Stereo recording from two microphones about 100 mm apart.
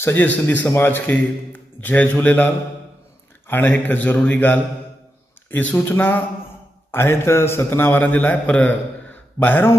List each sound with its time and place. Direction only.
0.0 s a man's voice: 20° left (ahead or behind)